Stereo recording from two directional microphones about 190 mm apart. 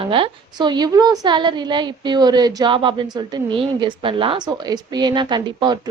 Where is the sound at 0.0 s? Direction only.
25° right (ahead or behind).